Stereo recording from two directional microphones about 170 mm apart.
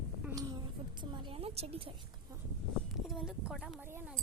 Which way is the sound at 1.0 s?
30° right (ahead or behind).